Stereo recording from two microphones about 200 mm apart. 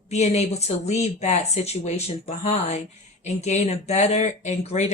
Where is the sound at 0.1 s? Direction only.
35° left (ahead or behind).